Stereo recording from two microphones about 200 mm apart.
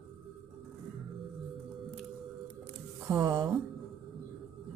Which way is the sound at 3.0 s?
15° right (ahead or behind).